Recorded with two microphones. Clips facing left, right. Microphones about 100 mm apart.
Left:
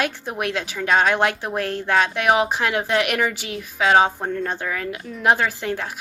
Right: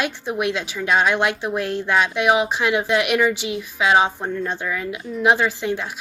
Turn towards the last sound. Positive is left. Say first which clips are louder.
# right 1 dB
turn(degrees=45)  # may be behind; listen again after turning